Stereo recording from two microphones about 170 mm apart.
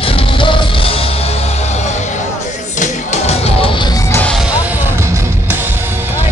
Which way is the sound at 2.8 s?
40° left (ahead or behind).